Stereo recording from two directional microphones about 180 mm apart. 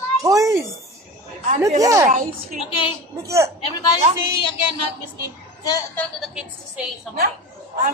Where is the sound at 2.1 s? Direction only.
45° right (ahead or behind).